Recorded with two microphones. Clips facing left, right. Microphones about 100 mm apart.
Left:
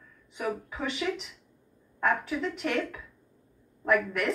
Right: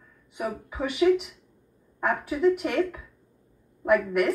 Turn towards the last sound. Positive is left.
turn(degrees=-15)  # may be behind; listen again after turning